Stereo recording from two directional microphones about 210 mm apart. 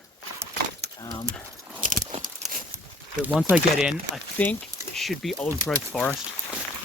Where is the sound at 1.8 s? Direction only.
40° right (ahead or behind).